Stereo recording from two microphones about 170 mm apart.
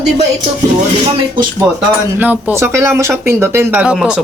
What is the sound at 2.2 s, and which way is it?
Speech, 10° right (ahead or behind).